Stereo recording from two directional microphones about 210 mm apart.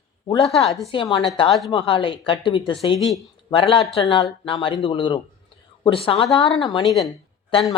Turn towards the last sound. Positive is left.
turn(degrees=20)  # may be behind; listen again after turning